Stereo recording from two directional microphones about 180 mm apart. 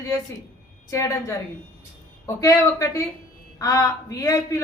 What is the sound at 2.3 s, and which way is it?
A woman's voice, 15° left (ahead or behind).